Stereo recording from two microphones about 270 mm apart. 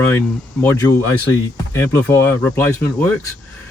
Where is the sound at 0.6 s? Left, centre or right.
Centre.